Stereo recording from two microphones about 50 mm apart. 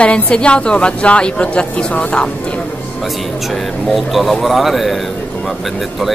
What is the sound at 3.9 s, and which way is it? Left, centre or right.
Speech, centre.